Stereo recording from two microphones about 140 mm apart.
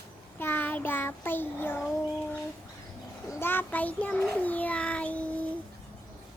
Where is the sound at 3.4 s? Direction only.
15° left (ahead or behind).